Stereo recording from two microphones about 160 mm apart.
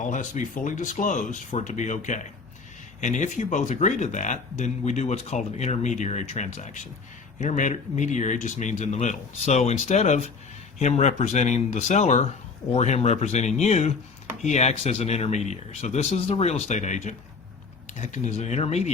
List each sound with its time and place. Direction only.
0.0 s speech: 50° left (ahead or behind)